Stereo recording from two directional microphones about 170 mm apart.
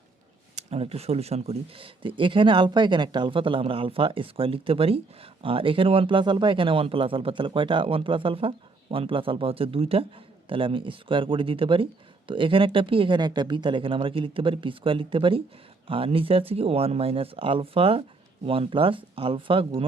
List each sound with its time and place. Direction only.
0.5 s speech: 35° right (ahead or behind)